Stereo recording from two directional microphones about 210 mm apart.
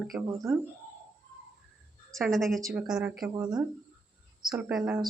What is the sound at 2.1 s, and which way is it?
Speech, centre (ahead or behind).